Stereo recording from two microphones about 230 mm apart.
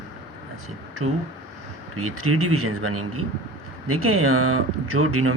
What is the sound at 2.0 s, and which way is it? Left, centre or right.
Speech, right.